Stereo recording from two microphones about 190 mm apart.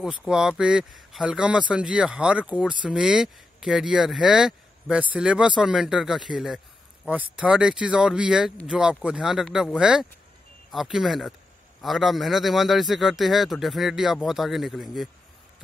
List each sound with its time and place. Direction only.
0.0 s speech: 5° right (ahead or behind)